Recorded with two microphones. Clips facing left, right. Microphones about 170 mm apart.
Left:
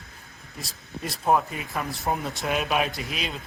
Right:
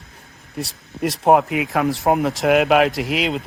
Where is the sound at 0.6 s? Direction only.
80° right.